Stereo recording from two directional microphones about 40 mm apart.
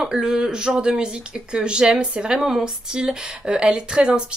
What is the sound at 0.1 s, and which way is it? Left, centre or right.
Speech, centre.